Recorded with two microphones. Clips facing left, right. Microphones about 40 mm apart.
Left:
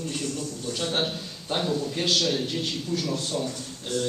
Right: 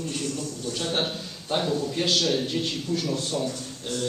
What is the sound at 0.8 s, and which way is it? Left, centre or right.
Speech, centre.